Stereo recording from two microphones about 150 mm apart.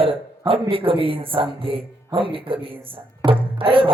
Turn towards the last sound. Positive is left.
turn(degrees=-35)  # may be behind; listen again after turning